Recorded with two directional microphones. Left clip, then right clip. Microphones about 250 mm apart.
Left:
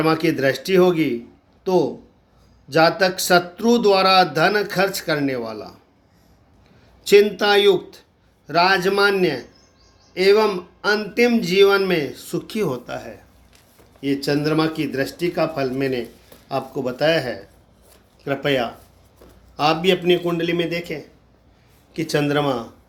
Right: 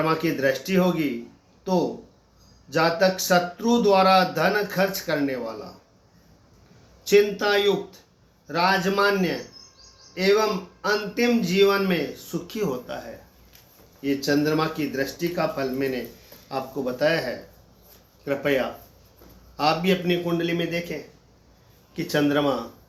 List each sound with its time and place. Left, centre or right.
0.0 s speech: left
7.0 s speech: left